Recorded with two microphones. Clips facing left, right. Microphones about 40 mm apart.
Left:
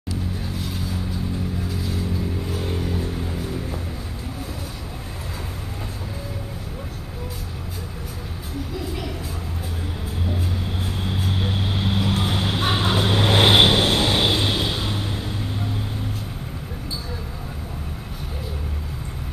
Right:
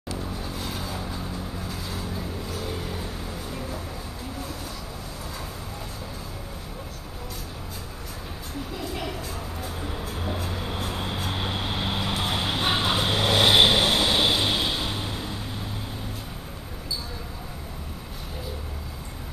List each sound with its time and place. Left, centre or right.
10.2 s vehicle: centre
13.4 s vehicle: left
14.4 s vehicle: centre